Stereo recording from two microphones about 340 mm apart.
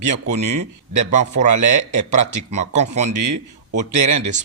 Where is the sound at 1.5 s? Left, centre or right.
Right.